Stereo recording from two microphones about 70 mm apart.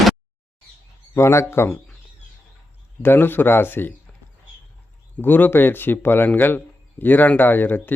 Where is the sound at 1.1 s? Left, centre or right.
Left.